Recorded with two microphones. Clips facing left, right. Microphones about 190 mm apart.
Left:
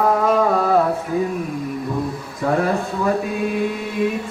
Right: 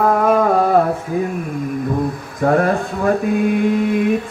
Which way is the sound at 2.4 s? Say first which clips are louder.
Right 4 dB; 55° right (ahead or behind).